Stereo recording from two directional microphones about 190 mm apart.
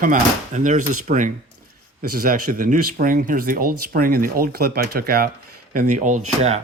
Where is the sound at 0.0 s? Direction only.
45° right (ahead or behind).